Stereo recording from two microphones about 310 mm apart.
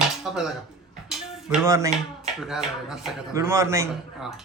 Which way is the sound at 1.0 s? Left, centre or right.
Centre.